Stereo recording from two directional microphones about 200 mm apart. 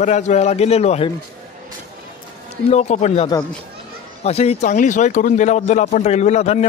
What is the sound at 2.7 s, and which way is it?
Speech, 35° left (ahead or behind).